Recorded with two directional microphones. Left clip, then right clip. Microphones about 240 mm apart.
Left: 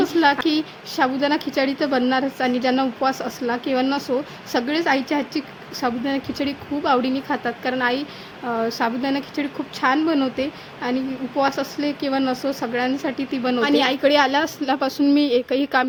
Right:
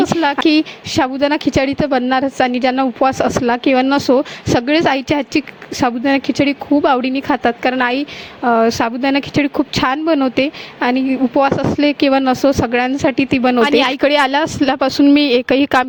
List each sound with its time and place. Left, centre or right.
0.0 s a woman's voice: right
13.6 s a woman's voice: right